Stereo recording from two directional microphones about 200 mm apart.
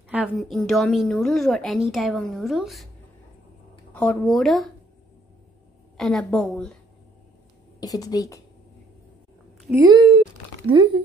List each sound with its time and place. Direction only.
0.1 s a woman's voice: 5° right (ahead or behind)
3.9 s a woman's voice: 5° left (ahead or behind)
5.9 s a woman's voice: centre (ahead or behind)
7.8 s a woman's voice: 20° left (ahead or behind)
9.6 s a sound: 10° right (ahead or behind)
9.8 s speech: 25° right (ahead or behind)